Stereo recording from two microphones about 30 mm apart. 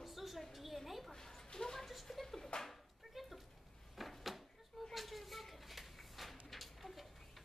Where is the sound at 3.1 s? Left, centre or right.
Centre.